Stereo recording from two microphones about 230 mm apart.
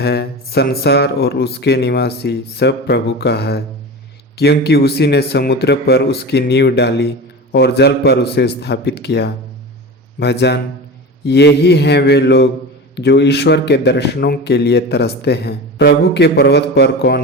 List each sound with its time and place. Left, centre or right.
0.0 s a man's voice: left